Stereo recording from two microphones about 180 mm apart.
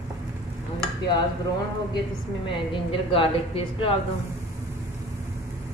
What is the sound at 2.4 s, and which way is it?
A woman's voice, 30° left (ahead or behind).